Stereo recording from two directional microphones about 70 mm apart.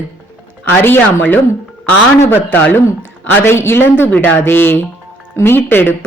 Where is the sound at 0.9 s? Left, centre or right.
Left.